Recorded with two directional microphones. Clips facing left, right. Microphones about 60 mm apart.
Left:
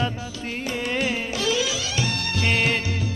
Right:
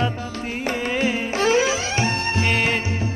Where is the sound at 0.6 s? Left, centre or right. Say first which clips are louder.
Right 3 dB; right.